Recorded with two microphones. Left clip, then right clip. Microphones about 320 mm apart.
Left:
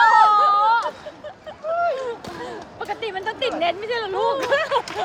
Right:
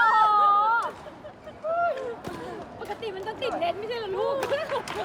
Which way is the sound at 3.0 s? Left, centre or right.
Left.